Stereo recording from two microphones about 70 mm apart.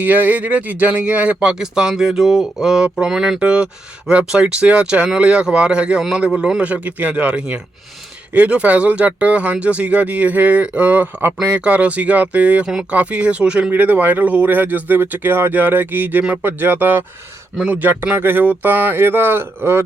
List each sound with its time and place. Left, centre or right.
0.0 s speech: right